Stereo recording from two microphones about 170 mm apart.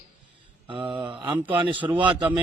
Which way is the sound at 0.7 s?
30° right (ahead or behind).